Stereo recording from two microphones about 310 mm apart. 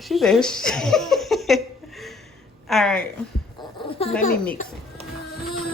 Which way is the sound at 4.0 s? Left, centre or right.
Centre.